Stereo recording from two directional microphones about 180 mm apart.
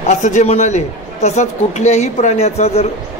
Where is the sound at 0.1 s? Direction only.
40° left (ahead or behind).